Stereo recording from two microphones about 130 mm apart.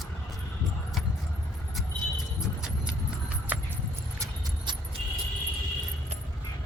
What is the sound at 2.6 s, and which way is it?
Horse, 10° right (ahead or behind).